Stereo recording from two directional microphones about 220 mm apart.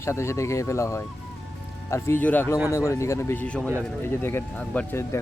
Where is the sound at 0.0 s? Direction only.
10° left (ahead or behind).